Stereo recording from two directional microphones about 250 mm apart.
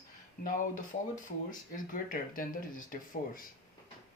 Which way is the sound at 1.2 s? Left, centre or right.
Left.